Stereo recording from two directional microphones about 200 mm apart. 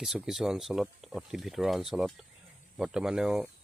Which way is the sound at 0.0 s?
Centre (ahead or behind).